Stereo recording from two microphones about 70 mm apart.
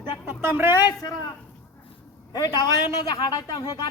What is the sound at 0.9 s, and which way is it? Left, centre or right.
Speech, left.